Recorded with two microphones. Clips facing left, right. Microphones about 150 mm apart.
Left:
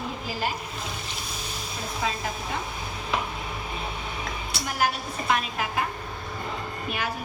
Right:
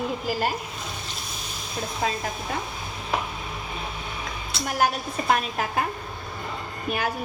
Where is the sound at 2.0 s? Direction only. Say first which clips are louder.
Right 2 dB; 45° right (ahead or behind).